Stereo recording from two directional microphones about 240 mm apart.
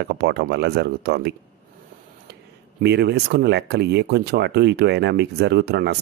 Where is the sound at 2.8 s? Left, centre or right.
Right.